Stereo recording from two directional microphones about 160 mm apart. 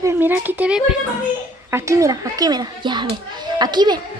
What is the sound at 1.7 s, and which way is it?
A woman's voice, 20° right (ahead or behind).